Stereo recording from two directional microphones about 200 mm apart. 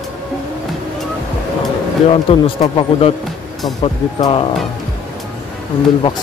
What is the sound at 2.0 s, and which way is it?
Speech, 25° left (ahead or behind).